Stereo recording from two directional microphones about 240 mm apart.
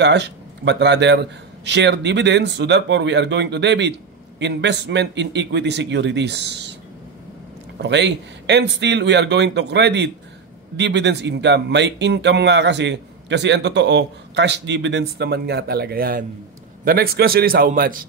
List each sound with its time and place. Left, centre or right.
0.0 s speech: right
7.8 s a man's voice: right